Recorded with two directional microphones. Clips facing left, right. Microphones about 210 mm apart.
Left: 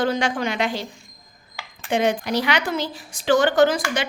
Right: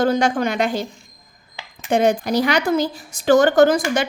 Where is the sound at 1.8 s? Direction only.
45° right (ahead or behind).